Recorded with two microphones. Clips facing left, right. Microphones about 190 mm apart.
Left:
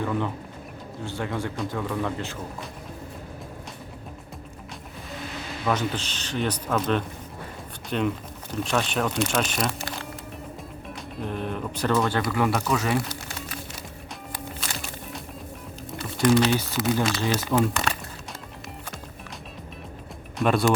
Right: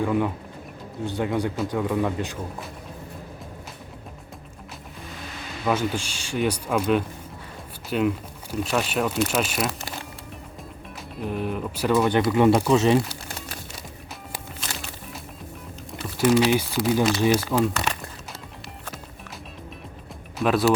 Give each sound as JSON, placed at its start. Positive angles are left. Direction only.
{"t": 0.0, "sound": "speech", "side_deg": -10}
{"t": 5.6, "sound": "speech", "side_deg": -10}
{"t": 11.2, "sound": "speech", "side_deg": -5}
{"t": 16.0, "sound": "speech", "side_deg": -5}
{"t": 20.4, "sound": "speech", "side_deg": 0}